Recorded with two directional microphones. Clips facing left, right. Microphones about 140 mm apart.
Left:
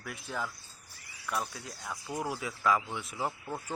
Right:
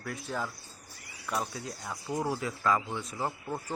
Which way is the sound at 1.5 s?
Centre (ahead or behind).